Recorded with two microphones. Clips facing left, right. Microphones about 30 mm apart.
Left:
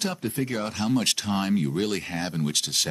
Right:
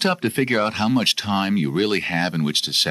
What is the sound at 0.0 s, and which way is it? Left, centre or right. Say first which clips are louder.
Speech: right 8 dB; right.